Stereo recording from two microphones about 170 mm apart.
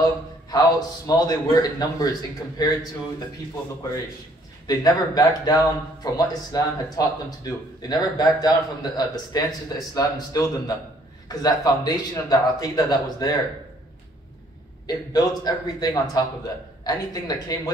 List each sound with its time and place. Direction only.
0.0 s speech: 20° left (ahead or behind)
4.6 s speech: 20° left (ahead or behind)
14.9 s speech: 20° left (ahead or behind)